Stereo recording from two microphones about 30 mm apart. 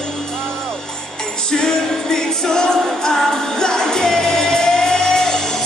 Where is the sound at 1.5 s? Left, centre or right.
Left.